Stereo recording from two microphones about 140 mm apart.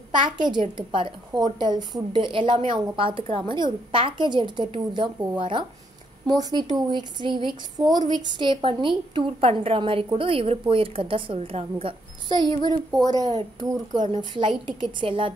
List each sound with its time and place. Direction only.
0.1 s a woman's voice: 35° right (ahead or behind)
13.0 s a woman's voice: 25° right (ahead or behind)